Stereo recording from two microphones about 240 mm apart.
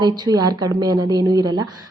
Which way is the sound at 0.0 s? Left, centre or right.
Centre.